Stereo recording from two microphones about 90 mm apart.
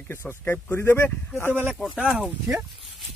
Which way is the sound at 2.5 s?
25° right (ahead or behind).